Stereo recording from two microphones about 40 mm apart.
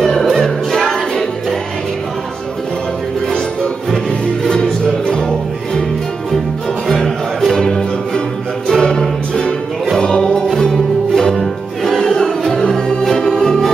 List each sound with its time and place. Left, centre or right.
0.0 s music: centre
4.5 s music: centre
6.9 s music: centre